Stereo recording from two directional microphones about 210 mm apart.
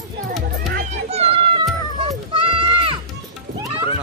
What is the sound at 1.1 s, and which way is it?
Music, 30° right (ahead or behind).